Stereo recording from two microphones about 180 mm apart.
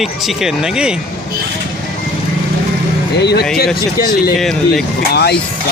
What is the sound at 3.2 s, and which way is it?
Speech, 70° left (ahead or behind).